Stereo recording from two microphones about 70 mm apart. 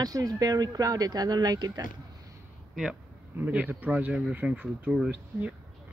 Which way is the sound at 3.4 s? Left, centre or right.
Right.